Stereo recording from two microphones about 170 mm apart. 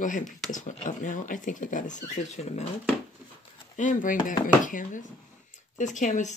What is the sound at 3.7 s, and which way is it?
Speech, 50° left (ahead or behind).